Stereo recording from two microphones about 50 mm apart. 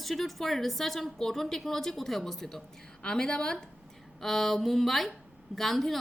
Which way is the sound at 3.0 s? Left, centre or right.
Centre.